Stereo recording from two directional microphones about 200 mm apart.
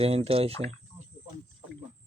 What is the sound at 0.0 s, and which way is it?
Speech, 30° right (ahead or behind).